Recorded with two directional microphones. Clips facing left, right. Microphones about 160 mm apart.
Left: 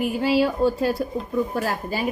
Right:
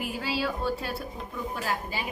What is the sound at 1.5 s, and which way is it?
Speech, 45° left (ahead or behind).